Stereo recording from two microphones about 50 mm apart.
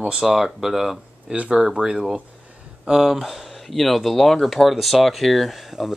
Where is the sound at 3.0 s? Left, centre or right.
Centre.